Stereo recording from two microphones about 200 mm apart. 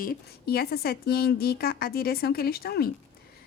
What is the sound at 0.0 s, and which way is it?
A woman's voice, 50° left (ahead or behind).